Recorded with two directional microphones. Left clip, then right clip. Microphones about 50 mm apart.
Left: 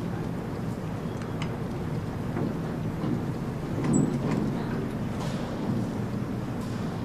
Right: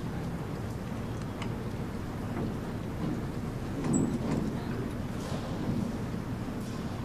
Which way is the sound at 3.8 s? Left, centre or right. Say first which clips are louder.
Left 4 dB; right.